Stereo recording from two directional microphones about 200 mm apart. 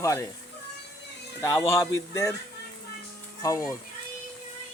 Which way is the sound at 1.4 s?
15° left (ahead or behind).